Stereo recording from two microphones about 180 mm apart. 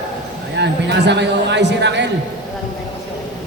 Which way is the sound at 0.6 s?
70° right (ahead or behind).